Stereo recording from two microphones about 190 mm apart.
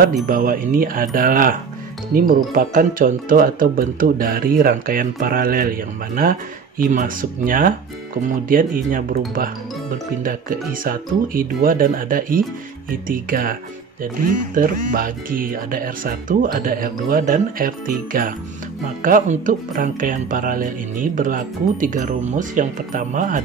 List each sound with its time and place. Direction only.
0.3 s speech: 45° right (ahead or behind)
10.2 s speech: 50° right (ahead or behind)